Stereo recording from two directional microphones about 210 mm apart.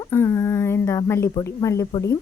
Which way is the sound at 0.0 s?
10° left (ahead or behind).